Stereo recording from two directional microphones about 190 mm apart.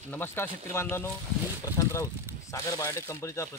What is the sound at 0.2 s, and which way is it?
Speech, 10° left (ahead or behind).